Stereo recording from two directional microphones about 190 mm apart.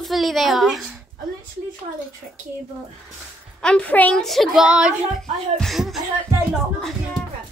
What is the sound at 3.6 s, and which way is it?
A woman's voice, 5° left (ahead or behind).